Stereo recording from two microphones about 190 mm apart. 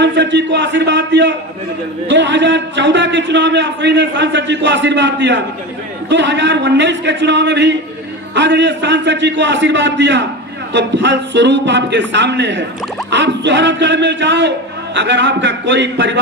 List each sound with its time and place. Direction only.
0.0 s a man's voice: 70° right (ahead or behind)